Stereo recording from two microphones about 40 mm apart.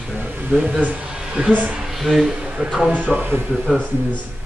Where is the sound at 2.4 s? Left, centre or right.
Right.